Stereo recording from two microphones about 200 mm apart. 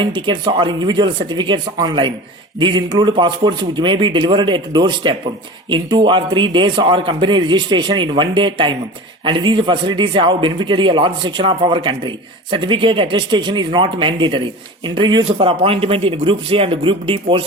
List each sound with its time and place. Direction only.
0.0 s a man's voice: 25° right (ahead or behind)